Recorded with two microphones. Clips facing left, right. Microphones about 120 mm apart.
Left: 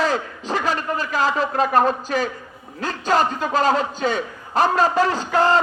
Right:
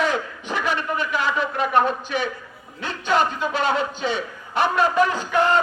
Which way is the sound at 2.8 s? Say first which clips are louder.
Left 2 dB; 40° left (ahead or behind).